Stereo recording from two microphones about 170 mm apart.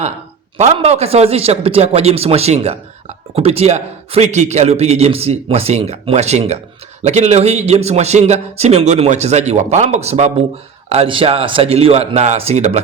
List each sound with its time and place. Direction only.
0.5 s a man's voice: 40° right (ahead or behind)